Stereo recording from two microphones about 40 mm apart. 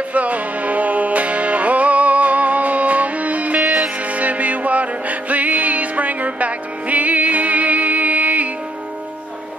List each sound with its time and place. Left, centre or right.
0.1 s music: right
3.6 s music: centre
4.0 s music: right